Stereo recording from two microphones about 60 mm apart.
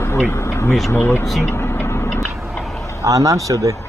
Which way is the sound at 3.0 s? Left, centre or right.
Right.